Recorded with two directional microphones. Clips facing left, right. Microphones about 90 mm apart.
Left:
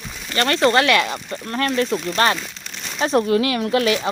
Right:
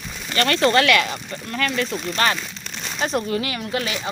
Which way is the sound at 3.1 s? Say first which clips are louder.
Left 9 dB; 50° left (ahead or behind).